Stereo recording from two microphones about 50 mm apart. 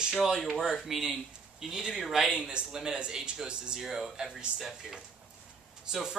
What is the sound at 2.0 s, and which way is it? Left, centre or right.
Speech, centre.